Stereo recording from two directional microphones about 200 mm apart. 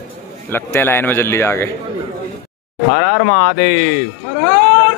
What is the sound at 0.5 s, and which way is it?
Speech, 10° left (ahead or behind).